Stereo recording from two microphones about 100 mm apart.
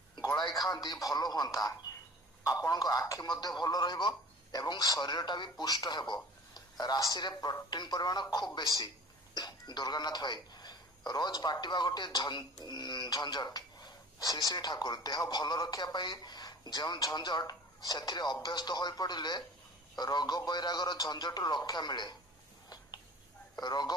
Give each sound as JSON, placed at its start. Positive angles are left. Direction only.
{"t": 0.7, "sound": "a man's voice", "side_deg": 40}
{"t": 23.6, "sound": "speech", "side_deg": 45}